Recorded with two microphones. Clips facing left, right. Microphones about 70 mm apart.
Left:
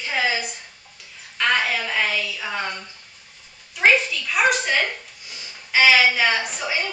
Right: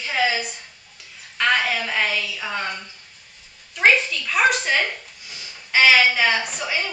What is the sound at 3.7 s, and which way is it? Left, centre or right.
Speech, centre.